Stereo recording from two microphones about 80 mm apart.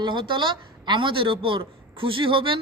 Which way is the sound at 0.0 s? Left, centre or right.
Right.